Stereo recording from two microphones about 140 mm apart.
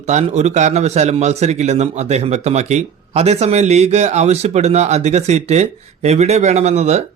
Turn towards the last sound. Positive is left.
turn(degrees=-50)  # may be behind; listen again after turning